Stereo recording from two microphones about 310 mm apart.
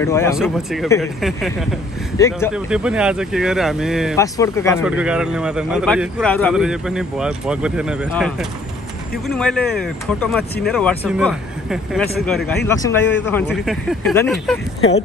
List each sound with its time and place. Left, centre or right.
0.0 s a man's voice: centre
2.1 s speech: centre
2.5 s a man's voice: centre
4.2 s speech: centre
4.8 s a man's voice: centre
12.6 s speech: centre
13.7 s a man's voice: centre
14.8 s speech: left